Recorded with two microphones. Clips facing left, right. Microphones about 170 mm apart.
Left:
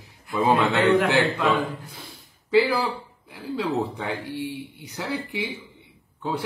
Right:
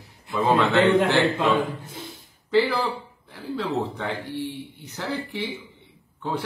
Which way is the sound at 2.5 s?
10° left (ahead or behind).